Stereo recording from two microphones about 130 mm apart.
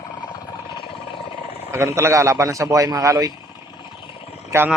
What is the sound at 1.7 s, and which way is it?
A man's voice, 20° right (ahead or behind).